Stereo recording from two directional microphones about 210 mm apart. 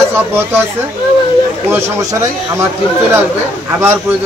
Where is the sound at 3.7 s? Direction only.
10° right (ahead or behind).